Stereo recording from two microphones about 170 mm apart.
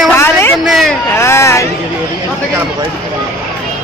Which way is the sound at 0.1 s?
15° left (ahead or behind).